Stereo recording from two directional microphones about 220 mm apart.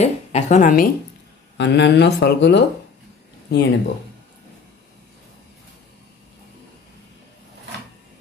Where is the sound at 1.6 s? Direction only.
50° left (ahead or behind).